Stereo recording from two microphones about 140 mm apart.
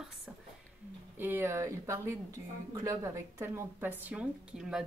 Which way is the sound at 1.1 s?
15° right (ahead or behind).